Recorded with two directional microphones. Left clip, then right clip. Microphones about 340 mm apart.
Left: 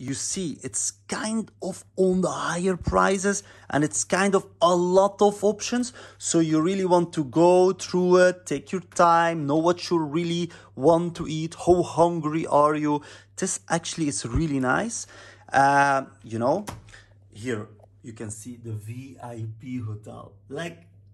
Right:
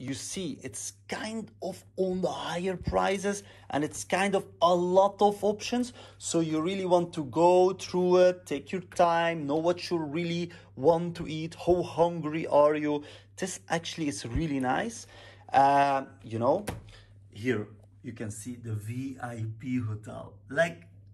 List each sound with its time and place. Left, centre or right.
0.0 s speech: centre
2.6 s speech: left
3.0 s speech: centre
5.5 s speech: left
5.8 s speech: left
18.0 s speech: centre
18.3 s speech: centre